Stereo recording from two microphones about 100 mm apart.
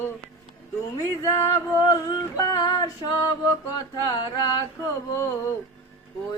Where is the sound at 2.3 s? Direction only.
35° left (ahead or behind).